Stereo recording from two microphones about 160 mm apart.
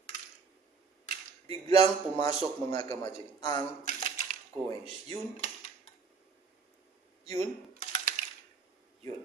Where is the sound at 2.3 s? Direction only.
40° right (ahead or behind).